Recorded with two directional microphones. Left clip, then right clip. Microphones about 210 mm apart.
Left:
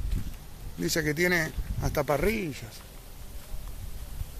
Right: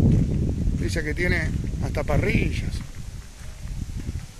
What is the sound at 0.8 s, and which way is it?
Speech, 15° left (ahead or behind).